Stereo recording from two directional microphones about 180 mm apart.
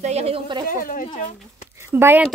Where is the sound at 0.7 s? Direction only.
50° left (ahead or behind).